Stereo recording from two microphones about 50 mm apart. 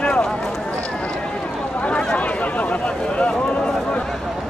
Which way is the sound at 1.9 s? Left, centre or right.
Left.